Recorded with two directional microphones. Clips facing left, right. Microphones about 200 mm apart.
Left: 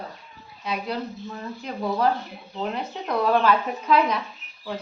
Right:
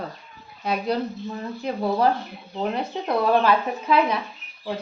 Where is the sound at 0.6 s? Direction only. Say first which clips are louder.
Right 5 dB; 50° right (ahead or behind).